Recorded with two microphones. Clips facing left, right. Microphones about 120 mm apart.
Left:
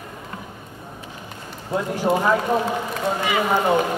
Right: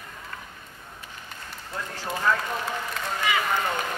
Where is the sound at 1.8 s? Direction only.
20° left (ahead or behind).